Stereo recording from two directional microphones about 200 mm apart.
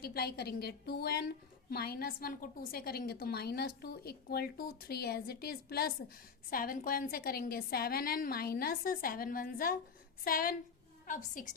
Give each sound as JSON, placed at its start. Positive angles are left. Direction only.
{"t": 0.0, "sound": "a woman's voice", "side_deg": 50}